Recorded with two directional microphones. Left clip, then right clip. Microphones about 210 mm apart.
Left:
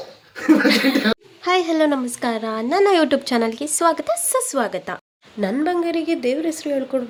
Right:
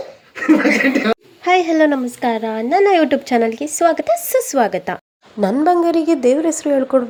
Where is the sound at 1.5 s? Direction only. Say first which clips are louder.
Right 4 dB; 15° right (ahead or behind).